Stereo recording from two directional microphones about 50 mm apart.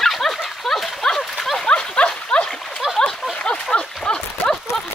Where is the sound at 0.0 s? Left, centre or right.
Centre.